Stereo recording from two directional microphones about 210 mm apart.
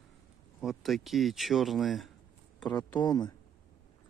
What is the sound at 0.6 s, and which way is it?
Speech, centre (ahead or behind).